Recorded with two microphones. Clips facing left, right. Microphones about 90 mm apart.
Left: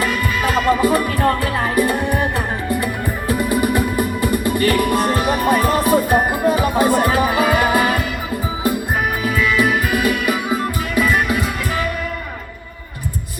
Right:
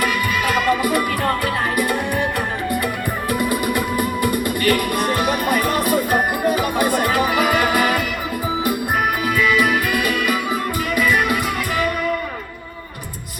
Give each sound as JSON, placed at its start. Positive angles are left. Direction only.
{"t": 0.0, "sound": "music", "side_deg": 30}
{"t": 3.2, "sound": "music", "side_deg": 25}
{"t": 9.2, "sound": "music", "side_deg": 25}